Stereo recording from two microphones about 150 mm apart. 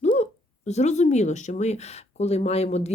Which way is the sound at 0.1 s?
50° left (ahead or behind).